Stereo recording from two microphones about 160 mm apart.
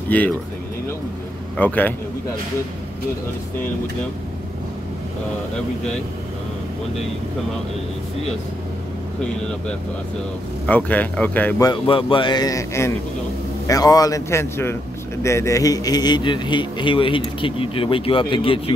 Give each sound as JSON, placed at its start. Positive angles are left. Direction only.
{"t": 0.1, "sound": "speech", "side_deg": 10}
{"t": 1.6, "sound": "speech", "side_deg": 10}
{"t": 10.7, "sound": "speech", "side_deg": 10}
{"t": 11.6, "sound": "a man's voice", "side_deg": 30}